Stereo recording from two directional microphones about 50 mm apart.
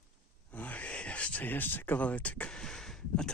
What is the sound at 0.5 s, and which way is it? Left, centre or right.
Speech, left.